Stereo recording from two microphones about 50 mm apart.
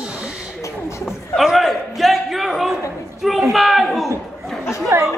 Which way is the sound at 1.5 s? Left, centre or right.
Centre.